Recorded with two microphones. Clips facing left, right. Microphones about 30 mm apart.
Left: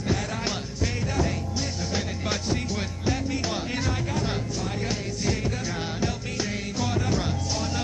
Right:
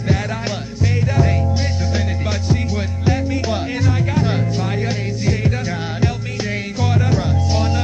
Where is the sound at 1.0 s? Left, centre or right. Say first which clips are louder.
Right 8 dB; right.